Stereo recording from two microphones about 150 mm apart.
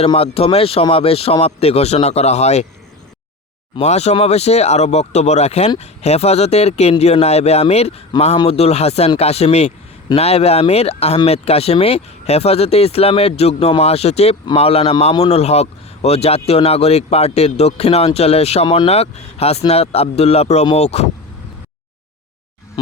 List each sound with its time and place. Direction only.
0.0 s speech: 40° left (ahead or behind)
3.8 s speech: 45° left (ahead or behind)